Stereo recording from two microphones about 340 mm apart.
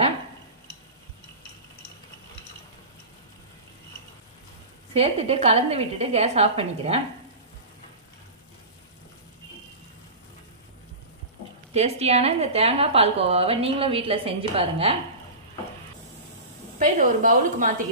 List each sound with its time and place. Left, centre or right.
4.9 s a woman's voice: centre
11.7 s a woman's voice: centre
16.7 s a woman's voice: right